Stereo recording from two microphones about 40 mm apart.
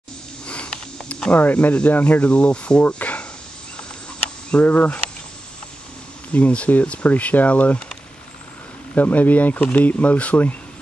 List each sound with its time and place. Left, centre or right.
0.5 s a sound: left
1.3 s speech: left
2.2 s speech: left
3.0 s snake: left
4.6 s speech: left
6.3 s speech: left
8.9 s speech: left